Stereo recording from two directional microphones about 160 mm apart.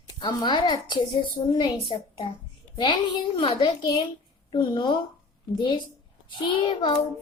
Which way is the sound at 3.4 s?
45° left (ahead or behind).